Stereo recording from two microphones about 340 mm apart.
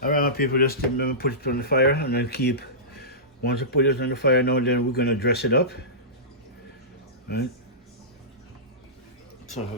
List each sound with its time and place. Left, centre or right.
0.0 s speech: left